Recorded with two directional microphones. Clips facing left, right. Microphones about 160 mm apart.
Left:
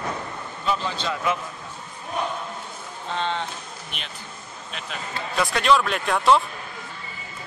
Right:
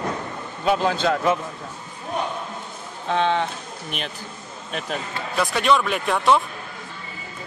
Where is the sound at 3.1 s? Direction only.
60° right (ahead or behind).